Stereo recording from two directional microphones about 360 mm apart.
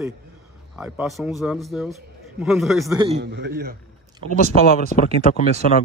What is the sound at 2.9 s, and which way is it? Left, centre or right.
Speech, centre.